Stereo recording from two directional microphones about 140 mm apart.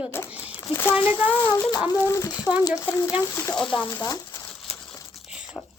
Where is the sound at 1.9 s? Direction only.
20° left (ahead or behind).